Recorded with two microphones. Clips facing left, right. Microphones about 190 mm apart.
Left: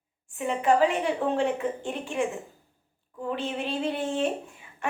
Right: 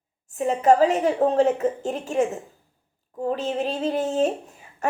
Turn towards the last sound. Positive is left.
turn(degrees=-40)  # may be behind; listen again after turning